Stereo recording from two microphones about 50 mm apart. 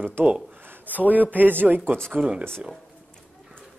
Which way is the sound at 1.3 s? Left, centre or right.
Right.